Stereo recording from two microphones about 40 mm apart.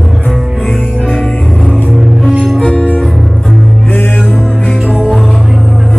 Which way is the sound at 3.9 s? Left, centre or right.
Left.